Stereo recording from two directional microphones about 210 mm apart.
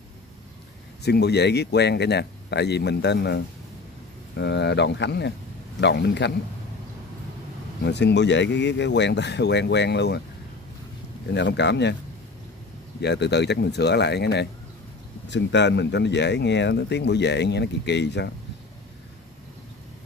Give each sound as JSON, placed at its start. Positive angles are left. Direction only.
{"t": 1.0, "sound": "speech", "side_deg": 50}
{"t": 7.8, "sound": "speech", "side_deg": 55}
{"t": 11.3, "sound": "speech", "side_deg": 55}
{"t": 13.0, "sound": "speech", "side_deg": 55}